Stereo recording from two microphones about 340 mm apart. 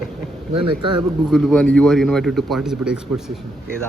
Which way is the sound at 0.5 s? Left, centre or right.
Centre.